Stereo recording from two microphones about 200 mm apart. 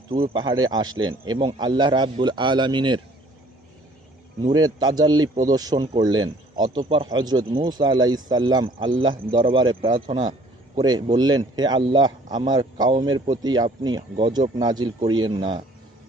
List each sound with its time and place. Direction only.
0.1 s speech: 25° right (ahead or behind)
0.9 s speech: 80° right
1.3 s speech: 20° right (ahead or behind)
4.5 s speech: 20° right (ahead or behind)